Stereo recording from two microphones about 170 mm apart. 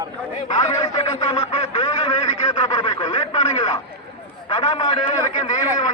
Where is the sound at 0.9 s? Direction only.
35° left (ahead or behind).